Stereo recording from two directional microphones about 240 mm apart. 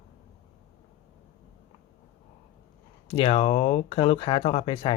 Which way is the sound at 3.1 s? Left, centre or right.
Left.